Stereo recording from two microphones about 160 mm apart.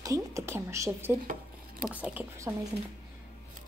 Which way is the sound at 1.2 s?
60° right (ahead or behind).